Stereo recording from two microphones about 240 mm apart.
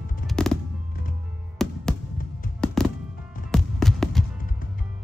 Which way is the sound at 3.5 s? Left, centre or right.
Centre.